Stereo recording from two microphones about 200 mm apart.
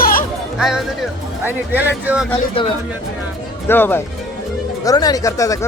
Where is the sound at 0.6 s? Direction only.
Centre (ahead or behind).